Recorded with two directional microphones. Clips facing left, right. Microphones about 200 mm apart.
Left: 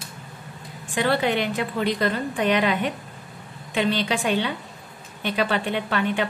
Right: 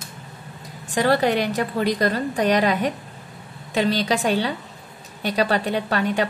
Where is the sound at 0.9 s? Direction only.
40° right (ahead or behind).